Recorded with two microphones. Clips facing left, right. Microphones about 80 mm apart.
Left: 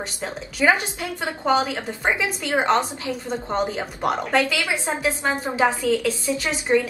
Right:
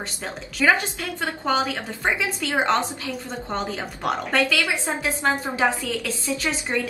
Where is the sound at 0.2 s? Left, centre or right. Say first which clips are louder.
Left 2 dB; centre.